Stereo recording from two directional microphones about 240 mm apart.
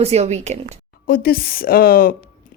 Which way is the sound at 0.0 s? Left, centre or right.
Right.